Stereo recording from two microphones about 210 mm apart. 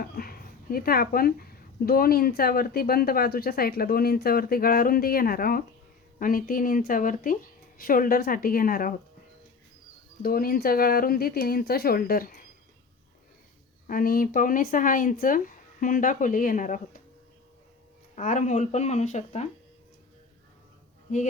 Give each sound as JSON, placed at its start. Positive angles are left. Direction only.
{"t": 0.0, "sound": "speech", "side_deg": 45}
{"t": 10.2, "sound": "speech", "side_deg": 45}
{"t": 13.8, "sound": "speech", "side_deg": 40}
{"t": 18.1, "sound": "speech", "side_deg": 35}